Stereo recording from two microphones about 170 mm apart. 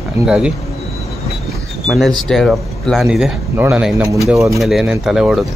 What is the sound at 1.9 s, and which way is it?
Speech, centre (ahead or behind).